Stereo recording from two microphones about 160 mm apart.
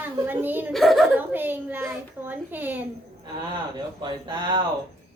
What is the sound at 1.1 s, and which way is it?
A woman's voice, 10° right (ahead or behind).